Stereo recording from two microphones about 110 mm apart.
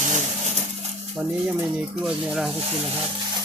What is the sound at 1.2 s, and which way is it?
Speech, 15° right (ahead or behind).